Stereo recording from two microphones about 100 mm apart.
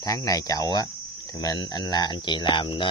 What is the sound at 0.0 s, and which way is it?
Speech, 35° left (ahead or behind).